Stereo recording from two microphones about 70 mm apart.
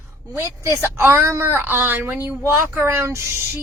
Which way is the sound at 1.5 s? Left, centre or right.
Right.